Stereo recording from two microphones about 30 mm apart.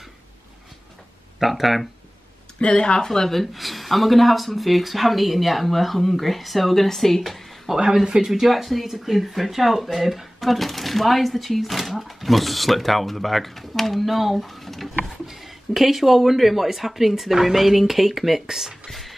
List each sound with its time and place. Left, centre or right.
1.4 s speech: centre
2.6 s speech: left
3.1 s speech: centre
7.7 s speech: centre
8.3 s speech: centre
15.0 s speech: centre
18.9 s music: centre